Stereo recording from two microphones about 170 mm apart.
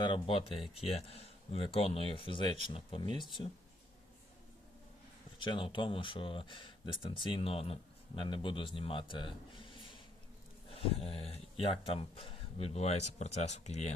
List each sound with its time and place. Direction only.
0.0 s speech: 30° left (ahead or behind)
5.4 s speech: 30° left (ahead or behind)